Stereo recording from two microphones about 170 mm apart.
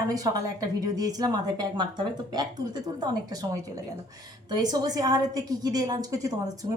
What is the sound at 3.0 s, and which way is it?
A woman's voice, 25° right (ahead or behind).